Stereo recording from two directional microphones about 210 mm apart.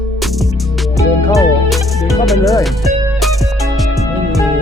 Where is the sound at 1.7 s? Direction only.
Centre (ahead or behind).